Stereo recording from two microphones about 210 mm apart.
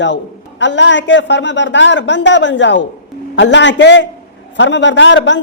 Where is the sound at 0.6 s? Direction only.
60° left (ahead or behind).